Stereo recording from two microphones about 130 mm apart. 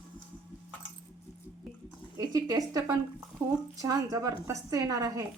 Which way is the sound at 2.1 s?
30° right (ahead or behind).